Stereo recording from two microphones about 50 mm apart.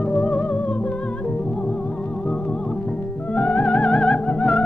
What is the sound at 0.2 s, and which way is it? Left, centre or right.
Music, left.